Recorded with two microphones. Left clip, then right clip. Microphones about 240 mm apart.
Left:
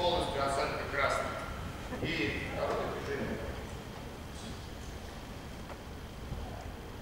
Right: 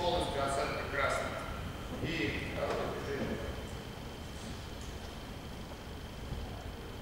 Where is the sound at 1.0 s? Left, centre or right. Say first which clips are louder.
Left 2 dB; centre.